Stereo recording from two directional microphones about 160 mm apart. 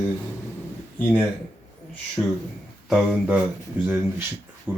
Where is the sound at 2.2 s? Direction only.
15° left (ahead or behind).